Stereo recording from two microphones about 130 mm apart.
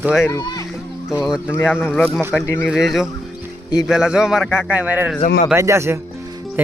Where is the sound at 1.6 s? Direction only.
15° left (ahead or behind).